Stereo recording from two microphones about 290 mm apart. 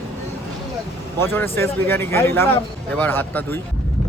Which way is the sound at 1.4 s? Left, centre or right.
Centre.